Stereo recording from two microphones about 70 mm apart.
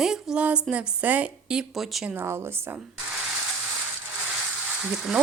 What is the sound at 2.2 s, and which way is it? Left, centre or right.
Speech, right.